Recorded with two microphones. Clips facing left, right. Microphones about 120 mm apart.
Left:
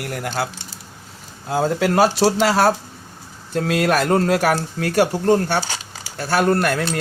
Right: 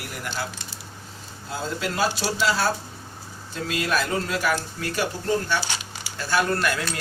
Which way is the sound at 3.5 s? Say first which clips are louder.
Left 7 dB; 60° left (ahead or behind).